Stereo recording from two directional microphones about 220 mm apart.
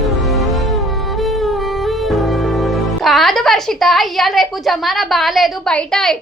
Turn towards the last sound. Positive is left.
turn(degrees=0)  # may be behind; listen again after turning